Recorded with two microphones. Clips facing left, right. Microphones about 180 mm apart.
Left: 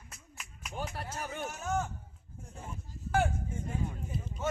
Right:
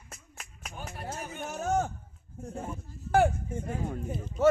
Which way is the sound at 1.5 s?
40° right (ahead or behind).